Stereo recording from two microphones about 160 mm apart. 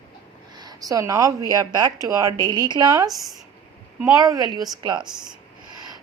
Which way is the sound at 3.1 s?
Centre (ahead or behind).